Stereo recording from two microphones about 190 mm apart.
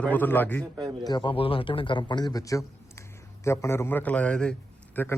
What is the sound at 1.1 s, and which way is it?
A man's voice, 25° left (ahead or behind).